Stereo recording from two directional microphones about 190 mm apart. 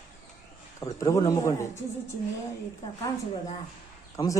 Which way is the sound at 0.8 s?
15° left (ahead or behind).